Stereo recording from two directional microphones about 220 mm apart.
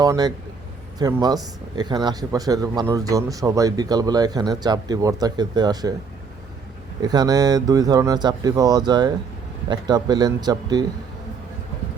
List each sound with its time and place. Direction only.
0.0 s speech: 20° right (ahead or behind)
7.0 s speech: 20° right (ahead or behind)